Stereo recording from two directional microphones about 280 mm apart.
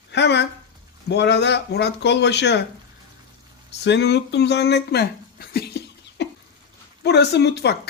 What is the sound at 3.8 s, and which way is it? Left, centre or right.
Speech, left.